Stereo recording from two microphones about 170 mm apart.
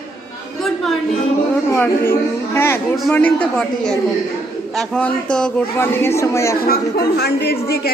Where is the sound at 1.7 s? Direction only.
15° left (ahead or behind).